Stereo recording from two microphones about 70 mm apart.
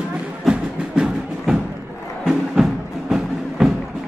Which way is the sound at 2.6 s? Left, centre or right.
Centre.